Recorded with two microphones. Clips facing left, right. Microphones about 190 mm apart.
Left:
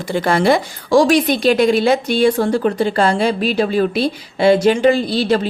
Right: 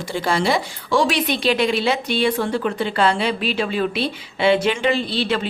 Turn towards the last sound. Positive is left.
turn(degrees=40)  # may be behind; listen again after turning